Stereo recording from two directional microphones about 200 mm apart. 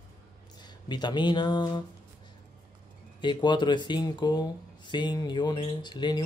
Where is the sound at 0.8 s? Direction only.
20° left (ahead or behind).